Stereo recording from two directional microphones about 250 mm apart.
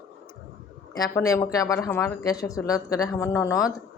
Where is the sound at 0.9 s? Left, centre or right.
Centre.